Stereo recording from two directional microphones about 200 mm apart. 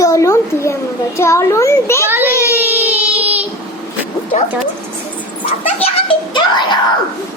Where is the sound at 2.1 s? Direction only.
10° right (ahead or behind).